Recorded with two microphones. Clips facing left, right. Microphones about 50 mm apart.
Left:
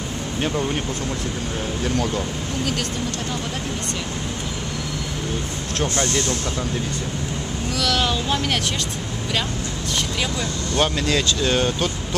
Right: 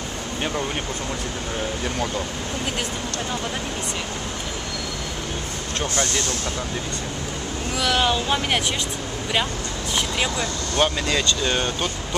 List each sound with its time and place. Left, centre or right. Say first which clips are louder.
5.8 s speech: left 3 dB; centre
7.7 s speech: right 1 dB; centre
10.8 s speech: left 1 dB; centre